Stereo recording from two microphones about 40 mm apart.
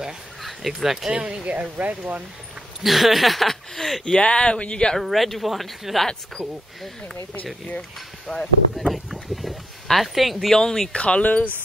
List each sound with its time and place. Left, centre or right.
0.4 s a sound: centre
1.1 s speech: right
1.5 s speech: right
2.8 s speech: centre
4.0 s speech: left
4.9 s speech: centre
8.3 s speech: centre
8.7 s a sound: centre
10.5 s speech: centre
10.9 s speech: left
11.2 s speech: left